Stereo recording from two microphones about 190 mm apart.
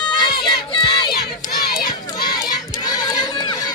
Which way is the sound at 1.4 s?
50° left (ahead or behind).